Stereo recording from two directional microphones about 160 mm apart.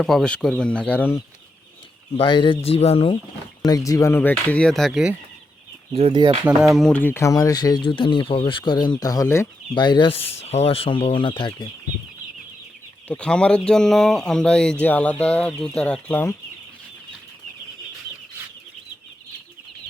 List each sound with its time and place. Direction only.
0.0 s speech: centre (ahead or behind)
2.1 s speech: 30° left (ahead or behind)
3.7 s speech: 20° left (ahead or behind); by 5.1 s centre (ahead or behind)
5.9 s speech: 35° right (ahead or behind)
6.4 s speech: 5° right (ahead or behind); by 11.7 s 30° left (ahead or behind)
13.1 s speech: 5° left (ahead or behind)